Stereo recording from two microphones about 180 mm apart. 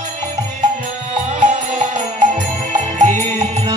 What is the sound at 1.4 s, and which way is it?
Music, 45° right (ahead or behind).